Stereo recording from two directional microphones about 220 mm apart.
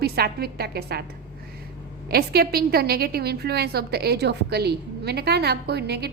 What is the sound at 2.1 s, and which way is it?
A woman's voice, 45° right (ahead or behind).